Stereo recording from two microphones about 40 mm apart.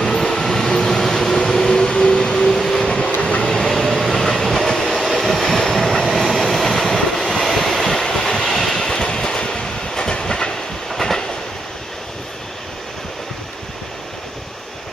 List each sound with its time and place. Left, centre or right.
0.0 s train: centre
1.9 s vehicle: left
3.2 s vehicle: left
3.4 s train: centre